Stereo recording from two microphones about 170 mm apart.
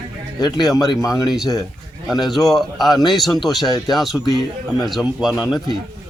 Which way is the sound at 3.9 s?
Centre (ahead or behind).